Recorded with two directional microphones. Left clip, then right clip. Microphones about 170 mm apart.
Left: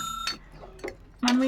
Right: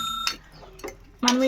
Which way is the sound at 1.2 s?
50° right (ahead or behind).